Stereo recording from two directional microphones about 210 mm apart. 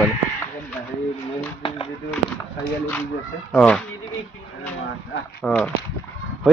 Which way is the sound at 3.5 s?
5° left (ahead or behind).